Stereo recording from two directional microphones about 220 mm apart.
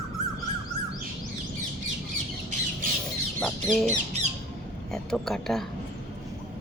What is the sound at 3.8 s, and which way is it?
Squawk, 30° right (ahead or behind).